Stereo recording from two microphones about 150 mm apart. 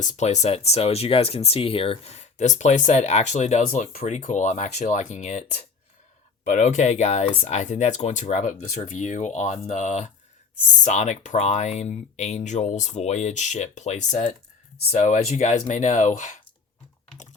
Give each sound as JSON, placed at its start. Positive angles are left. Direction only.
{"t": 0.0, "sound": "speech", "side_deg": 50}